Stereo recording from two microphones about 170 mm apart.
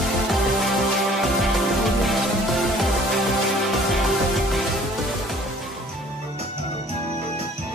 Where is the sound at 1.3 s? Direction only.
Centre (ahead or behind).